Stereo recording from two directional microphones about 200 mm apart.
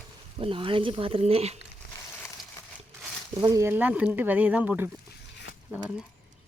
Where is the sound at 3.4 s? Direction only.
15° right (ahead or behind).